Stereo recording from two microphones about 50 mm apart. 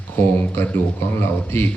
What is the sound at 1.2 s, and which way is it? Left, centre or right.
Speech, left.